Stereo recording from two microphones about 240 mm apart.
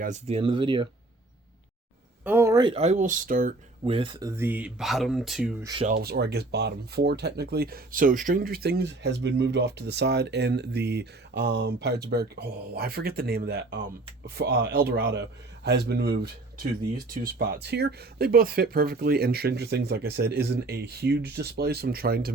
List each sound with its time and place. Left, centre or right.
0.0 s speech: right
2.2 s speech: centre
5.8 s speech: right
17.3 s speech: right